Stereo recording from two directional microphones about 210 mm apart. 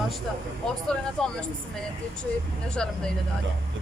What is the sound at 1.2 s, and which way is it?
Speech, 5° left (ahead or behind).